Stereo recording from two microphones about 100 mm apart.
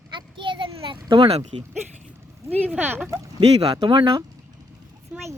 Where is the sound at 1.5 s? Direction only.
70° right (ahead or behind).